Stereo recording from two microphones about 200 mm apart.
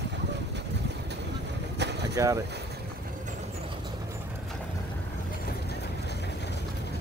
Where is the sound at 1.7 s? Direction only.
60° right (ahead or behind).